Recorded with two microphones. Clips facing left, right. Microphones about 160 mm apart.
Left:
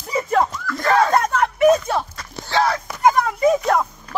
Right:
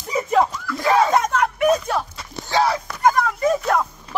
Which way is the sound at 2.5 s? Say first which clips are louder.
Even; 10° right (ahead or behind).